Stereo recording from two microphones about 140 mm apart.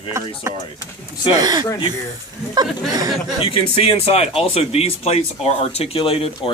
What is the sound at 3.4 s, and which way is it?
Speech, 40° left (ahead or behind).